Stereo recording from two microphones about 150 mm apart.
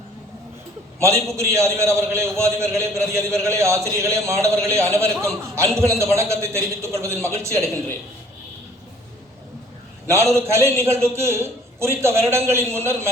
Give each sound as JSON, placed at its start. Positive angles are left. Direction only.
{"t": 0.9, "sound": "a man's voice", "side_deg": -20}
{"t": 10.1, "sound": "a man's voice", "side_deg": -20}